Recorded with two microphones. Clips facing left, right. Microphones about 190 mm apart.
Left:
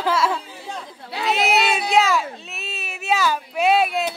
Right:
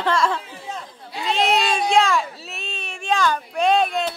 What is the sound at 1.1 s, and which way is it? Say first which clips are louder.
Speech: left 3 dB; 75° left (ahead or behind).